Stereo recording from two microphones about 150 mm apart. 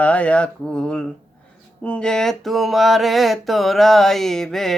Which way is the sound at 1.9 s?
5° left (ahead or behind).